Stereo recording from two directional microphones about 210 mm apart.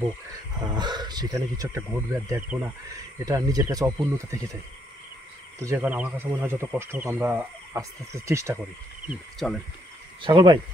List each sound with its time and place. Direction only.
0.7 s speech: 20° right (ahead or behind)
5.6 s speech: 10° right (ahead or behind)
9.0 s speech: centre (ahead or behind)
10.2 s speech: 20° right (ahead or behind)